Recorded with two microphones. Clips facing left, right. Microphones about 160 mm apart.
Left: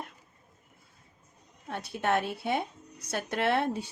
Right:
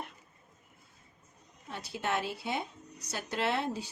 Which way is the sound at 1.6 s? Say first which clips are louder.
Left 5 dB; 55° left (ahead or behind).